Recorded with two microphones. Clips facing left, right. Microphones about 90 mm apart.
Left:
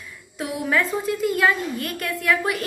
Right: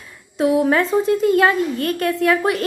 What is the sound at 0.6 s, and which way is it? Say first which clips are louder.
A woman's voice: right 6 dB; 35° right (ahead or behind).